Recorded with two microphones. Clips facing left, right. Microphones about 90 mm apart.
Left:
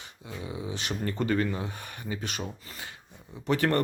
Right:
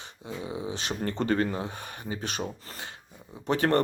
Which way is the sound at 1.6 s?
25° right (ahead or behind).